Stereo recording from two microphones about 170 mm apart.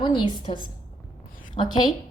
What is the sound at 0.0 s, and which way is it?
A woman's voice, 30° left (ahead or behind).